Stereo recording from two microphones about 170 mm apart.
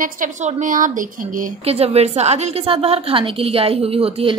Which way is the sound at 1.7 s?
35° right (ahead or behind).